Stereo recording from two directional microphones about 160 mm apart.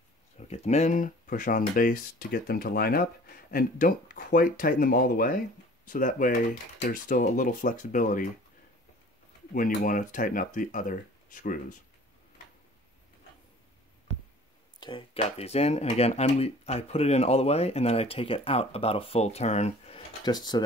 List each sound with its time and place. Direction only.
0.4 s speech: 45° left (ahead or behind)
9.5 s speech: 55° left (ahead or behind)
14.8 s speech: 30° left (ahead or behind)
20.2 s speech: 25° left (ahead or behind)